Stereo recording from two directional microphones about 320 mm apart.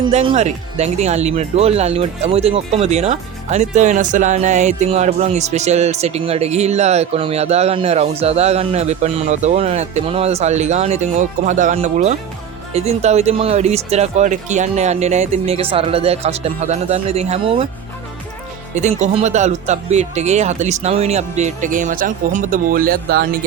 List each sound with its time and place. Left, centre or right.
0.0 s speech: centre
18.7 s speech: right